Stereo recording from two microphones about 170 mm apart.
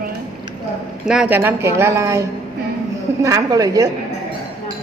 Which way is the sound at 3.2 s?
20° right (ahead or behind).